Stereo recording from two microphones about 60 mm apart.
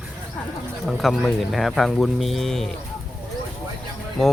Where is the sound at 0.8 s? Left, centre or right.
Centre.